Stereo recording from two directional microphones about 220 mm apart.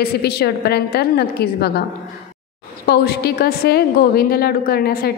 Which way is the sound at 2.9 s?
45° left (ahead or behind).